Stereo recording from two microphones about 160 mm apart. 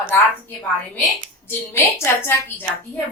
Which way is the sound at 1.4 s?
15° left (ahead or behind).